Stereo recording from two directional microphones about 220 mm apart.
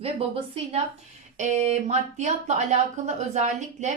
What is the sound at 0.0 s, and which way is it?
A woman's voice, 25° right (ahead or behind).